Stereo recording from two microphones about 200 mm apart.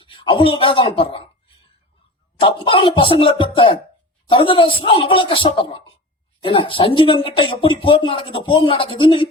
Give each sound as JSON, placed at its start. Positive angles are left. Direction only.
{"t": 0.0, "sound": "speech", "side_deg": 25}
{"t": 2.4, "sound": "speech", "side_deg": 25}